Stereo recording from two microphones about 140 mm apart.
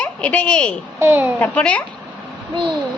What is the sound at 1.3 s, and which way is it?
Speech, 10° left (ahead or behind).